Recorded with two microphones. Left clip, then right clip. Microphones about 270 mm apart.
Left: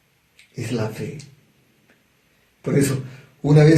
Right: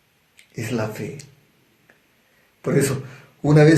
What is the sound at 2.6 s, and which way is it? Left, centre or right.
Speech, right.